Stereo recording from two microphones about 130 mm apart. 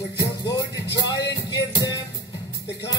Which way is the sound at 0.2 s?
30° left (ahead or behind).